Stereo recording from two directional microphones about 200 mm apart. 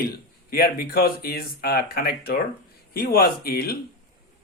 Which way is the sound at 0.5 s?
45° left (ahead or behind).